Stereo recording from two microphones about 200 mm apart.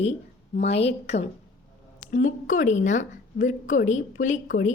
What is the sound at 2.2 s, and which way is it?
A woman's voice, 40° left (ahead or behind).